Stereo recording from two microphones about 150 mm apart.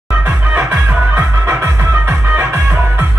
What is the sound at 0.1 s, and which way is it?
Music, 10° right (ahead or behind).